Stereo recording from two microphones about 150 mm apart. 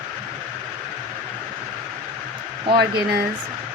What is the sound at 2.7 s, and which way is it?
Speech, 90° right.